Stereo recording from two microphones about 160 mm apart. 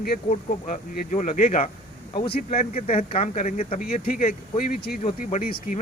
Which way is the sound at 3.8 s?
60° left (ahead or behind).